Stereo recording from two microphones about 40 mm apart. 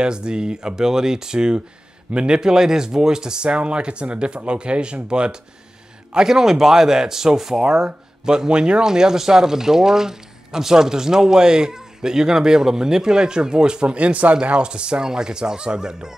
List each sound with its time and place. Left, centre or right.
0.0 s speech: right
6.1 s speech: centre